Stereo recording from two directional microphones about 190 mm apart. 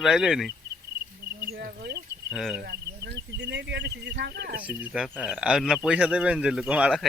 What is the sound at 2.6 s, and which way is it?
Speech, 60° right (ahead or behind).